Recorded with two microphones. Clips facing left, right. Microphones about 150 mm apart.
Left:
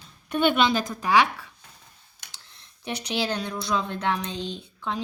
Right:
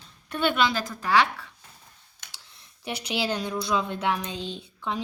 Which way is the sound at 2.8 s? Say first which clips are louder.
Left 1 dB; 5° right (ahead or behind).